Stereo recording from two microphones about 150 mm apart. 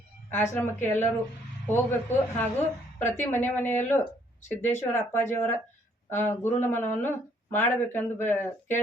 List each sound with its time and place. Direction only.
0.3 s speech: 15° left (ahead or behind)